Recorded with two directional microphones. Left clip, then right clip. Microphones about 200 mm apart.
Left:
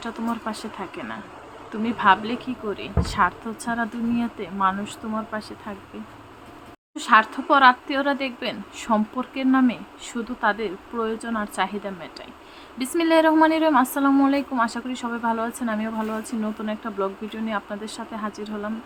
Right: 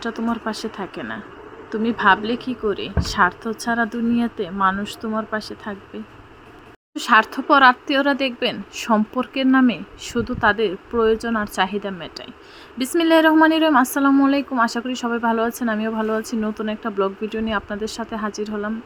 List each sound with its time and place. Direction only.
0.0 s a woman's voice: 20° right (ahead or behind)
6.9 s a woman's voice: 25° right (ahead or behind)